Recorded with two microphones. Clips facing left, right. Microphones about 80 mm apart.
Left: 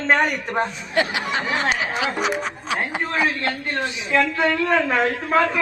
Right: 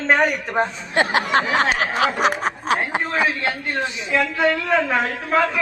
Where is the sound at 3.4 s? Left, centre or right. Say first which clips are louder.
Right 1 dB; centre.